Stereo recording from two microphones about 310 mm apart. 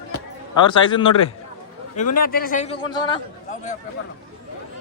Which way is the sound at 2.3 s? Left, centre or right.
Left.